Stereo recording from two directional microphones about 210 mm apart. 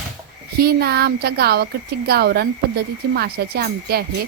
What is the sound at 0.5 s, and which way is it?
A woman's voice, 50° right (ahead or behind).